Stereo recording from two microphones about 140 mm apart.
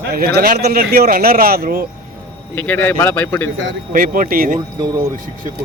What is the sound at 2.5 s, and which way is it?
Speech, 10° left (ahead or behind).